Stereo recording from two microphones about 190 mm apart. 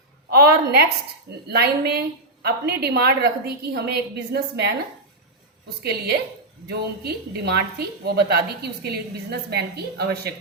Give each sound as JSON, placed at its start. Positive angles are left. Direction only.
{"t": 0.3, "sound": "a woman's voice", "side_deg": -55}
{"t": 5.8, "sound": "a woman's voice", "side_deg": -60}